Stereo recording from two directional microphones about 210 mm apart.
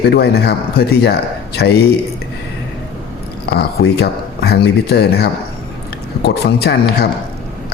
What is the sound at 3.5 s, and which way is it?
A man's voice, 50° left (ahead or behind).